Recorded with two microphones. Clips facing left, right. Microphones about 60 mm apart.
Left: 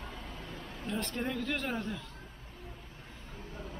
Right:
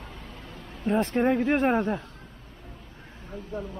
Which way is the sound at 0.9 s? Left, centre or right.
Right.